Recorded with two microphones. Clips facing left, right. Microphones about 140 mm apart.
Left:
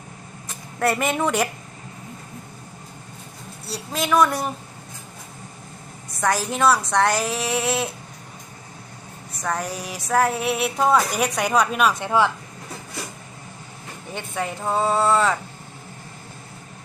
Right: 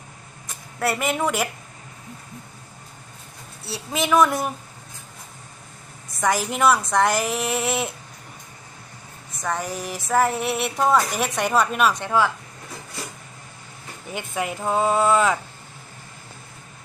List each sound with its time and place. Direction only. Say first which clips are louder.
0.8 s speech: left 2 dB; 5° right (ahead or behind)
3.7 s speech: right 1 dB; centre (ahead or behind)
6.1 s speech: even; 5° right (ahead or behind)
9.4 s speech: even; centre (ahead or behind)
12.0 s speech: left 1 dB; 20° left (ahead or behind)
14.1 s speech: right 1 dB; 10° right (ahead or behind)